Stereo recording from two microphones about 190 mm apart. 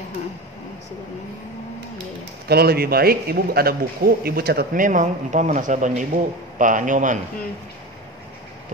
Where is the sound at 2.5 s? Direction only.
55° right (ahead or behind).